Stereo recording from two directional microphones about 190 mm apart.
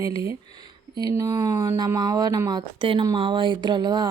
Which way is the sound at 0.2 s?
20° right (ahead or behind).